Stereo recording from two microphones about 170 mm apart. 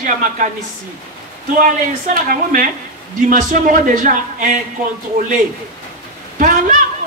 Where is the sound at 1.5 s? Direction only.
50° right (ahead or behind).